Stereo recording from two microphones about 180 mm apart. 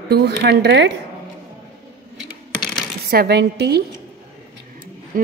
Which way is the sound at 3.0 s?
60° right (ahead or behind).